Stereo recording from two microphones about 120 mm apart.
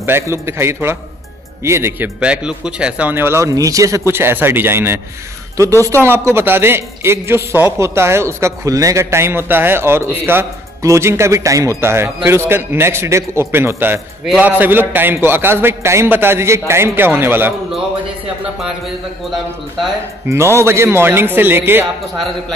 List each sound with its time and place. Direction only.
0.0 s a man's voice: 20° right (ahead or behind)
2.1 s a man's voice: 10° right (ahead or behind)
20.2 s a man's voice: 20° right (ahead or behind)